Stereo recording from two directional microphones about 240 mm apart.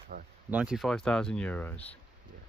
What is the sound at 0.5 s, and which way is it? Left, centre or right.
Speech, centre.